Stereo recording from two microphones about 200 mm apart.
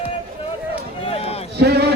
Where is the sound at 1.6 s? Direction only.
55° right (ahead or behind).